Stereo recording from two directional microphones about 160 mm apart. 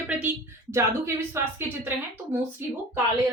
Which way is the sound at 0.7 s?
15° right (ahead or behind).